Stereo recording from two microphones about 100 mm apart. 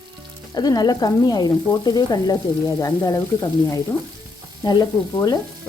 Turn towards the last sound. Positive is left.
turn(degrees=40)  # may be behind; listen again after turning